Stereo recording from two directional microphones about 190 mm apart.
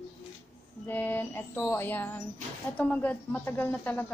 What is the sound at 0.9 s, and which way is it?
Music, 10° left (ahead or behind).